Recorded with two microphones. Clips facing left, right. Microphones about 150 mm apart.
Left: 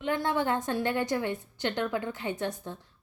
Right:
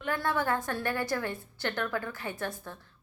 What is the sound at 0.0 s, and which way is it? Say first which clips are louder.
A woman's voice: left 2 dB; 20° left (ahead or behind).